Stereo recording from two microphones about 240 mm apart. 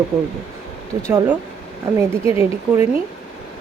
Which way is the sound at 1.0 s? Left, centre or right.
Centre.